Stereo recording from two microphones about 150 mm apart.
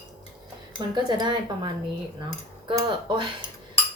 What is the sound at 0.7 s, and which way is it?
Speech, 30° right (ahead or behind).